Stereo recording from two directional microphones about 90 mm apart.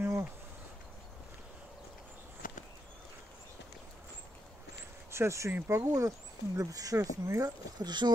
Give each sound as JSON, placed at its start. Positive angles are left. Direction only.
{"t": 0.0, "sound": "insect", "side_deg": -25}
{"t": 5.1, "sound": "speech", "side_deg": -30}
{"t": 7.8, "sound": "speech", "side_deg": -55}